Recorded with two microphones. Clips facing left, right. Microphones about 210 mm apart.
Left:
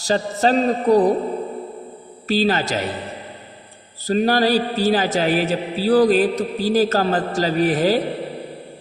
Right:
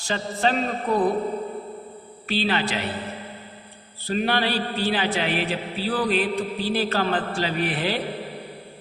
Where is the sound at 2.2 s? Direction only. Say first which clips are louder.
Left 5 dB; 40° left (ahead or behind).